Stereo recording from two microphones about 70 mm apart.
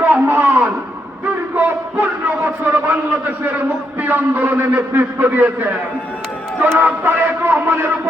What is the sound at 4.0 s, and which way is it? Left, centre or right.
A man's voice, right.